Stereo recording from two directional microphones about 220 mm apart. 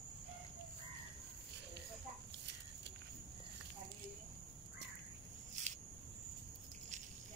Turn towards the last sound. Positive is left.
turn(degrees=-30)  # may be behind; listen again after turning